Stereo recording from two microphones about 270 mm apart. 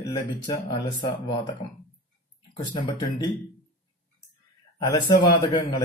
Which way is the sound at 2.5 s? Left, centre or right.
Centre.